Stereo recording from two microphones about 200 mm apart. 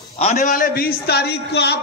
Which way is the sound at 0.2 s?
35° left (ahead or behind).